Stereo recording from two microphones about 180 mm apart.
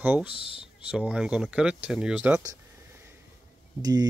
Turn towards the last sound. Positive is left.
turn(degrees=-20)  # may be behind; listen again after turning